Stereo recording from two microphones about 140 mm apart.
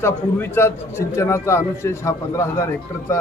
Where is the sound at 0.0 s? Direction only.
15° left (ahead or behind).